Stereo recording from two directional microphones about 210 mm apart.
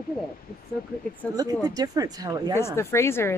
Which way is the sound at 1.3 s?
15° right (ahead or behind).